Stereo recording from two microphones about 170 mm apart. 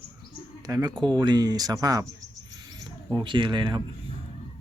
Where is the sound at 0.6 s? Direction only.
20° right (ahead or behind).